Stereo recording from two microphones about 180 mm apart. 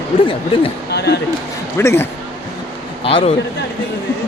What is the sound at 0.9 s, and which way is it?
Speech, 65° left (ahead or behind).